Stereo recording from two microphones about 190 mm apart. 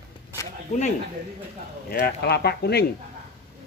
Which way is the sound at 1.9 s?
55° left (ahead or behind).